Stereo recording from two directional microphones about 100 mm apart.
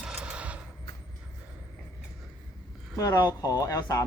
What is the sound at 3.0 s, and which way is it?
Speech, 35° left (ahead or behind).